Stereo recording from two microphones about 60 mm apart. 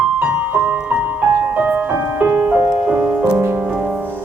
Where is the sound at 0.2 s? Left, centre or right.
Right.